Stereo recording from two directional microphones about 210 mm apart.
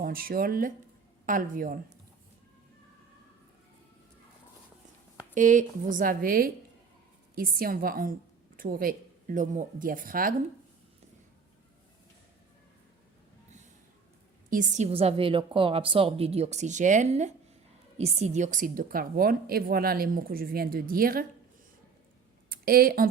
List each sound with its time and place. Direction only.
0.0 s a woman's voice: 45° right (ahead or behind)
5.3 s a woman's voice: 40° right (ahead or behind)
14.5 s a woman's voice: 35° right (ahead or behind)
22.4 s a sound: 45° right (ahead or behind)